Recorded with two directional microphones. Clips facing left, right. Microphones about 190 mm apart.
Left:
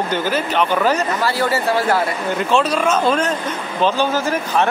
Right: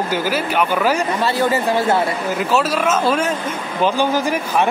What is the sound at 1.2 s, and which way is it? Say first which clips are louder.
Speech: right 2 dB; 20° right (ahead or behind).